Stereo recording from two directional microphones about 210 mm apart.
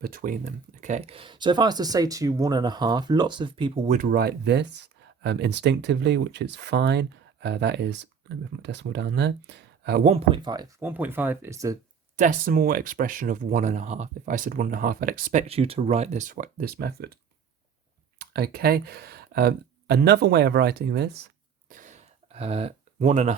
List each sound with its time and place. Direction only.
0.0 s speech: 40° right (ahead or behind); by 3.9 s 25° right (ahead or behind)
3.9 s speech: 45° right (ahead or behind)
10.1 s speech: 25° right (ahead or behind)
12.1 s speech: 40° right (ahead or behind)
18.2 s speech: 50° right (ahead or behind); by 23.3 s 35° right (ahead or behind)